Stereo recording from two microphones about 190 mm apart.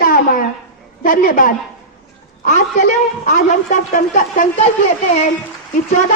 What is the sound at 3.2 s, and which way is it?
A woman's voice, 40° left (ahead or behind).